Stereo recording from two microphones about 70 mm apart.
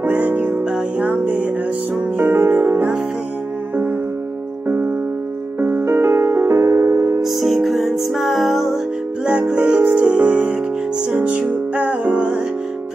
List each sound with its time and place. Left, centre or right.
0.0 s music: right
4.6 s music: right
7.2 s music: centre
9.2 s music: centre